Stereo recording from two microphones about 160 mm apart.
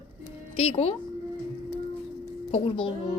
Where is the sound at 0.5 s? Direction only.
40° left (ahead or behind).